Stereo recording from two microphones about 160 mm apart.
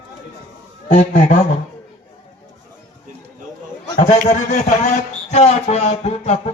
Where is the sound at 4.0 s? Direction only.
50° left (ahead or behind).